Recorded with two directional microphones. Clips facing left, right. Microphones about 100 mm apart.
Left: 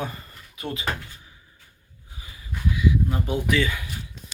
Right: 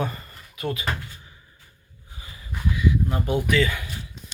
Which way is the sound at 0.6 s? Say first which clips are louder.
Right 3 dB; 20° left (ahead or behind).